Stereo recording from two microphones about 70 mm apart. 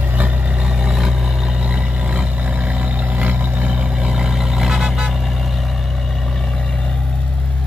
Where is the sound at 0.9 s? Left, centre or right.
Centre.